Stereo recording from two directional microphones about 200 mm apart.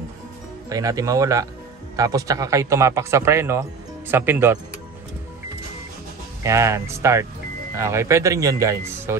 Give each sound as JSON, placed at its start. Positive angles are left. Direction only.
{"t": 0.7, "sound": "speech", "side_deg": -15}
{"t": 6.4, "sound": "speech", "side_deg": -15}